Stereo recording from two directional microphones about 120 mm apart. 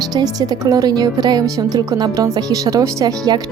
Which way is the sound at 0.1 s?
35° right (ahead or behind).